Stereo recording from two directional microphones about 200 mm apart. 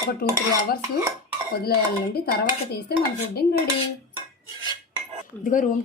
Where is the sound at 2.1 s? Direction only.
50° left (ahead or behind).